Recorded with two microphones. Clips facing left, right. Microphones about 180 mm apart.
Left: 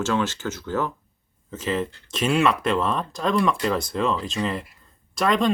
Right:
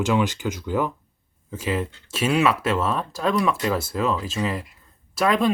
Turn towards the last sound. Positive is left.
turn(degrees=-5)  # may be behind; listen again after turning